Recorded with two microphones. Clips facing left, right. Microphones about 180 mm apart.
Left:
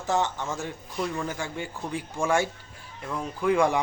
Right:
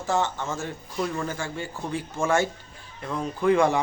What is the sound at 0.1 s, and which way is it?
Speech, 20° left (ahead or behind).